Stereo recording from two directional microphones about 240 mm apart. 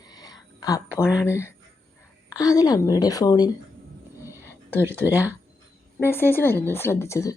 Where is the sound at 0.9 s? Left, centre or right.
Centre.